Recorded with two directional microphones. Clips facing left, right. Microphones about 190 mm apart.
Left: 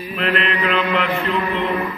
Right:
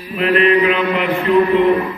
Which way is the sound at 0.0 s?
10° right (ahead or behind).